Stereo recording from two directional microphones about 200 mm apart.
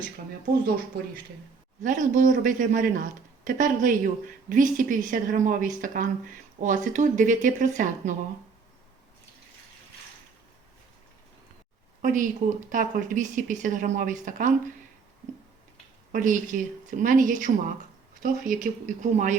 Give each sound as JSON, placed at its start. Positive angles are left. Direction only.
{"t": 1.8, "sound": "a man's voice", "side_deg": -40}
{"t": 12.0, "sound": "a man's voice", "side_deg": -40}
{"t": 16.1, "sound": "a man's voice", "side_deg": -40}